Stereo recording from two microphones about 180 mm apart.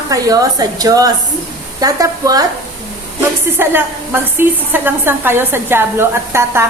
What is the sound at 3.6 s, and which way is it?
A woman's voice, 10° right (ahead or behind).